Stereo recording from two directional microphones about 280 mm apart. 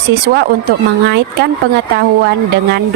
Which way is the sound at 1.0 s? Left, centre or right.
Right.